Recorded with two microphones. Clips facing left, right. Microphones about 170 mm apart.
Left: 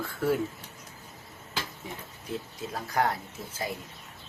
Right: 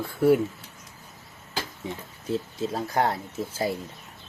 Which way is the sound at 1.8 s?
30° right (ahead or behind).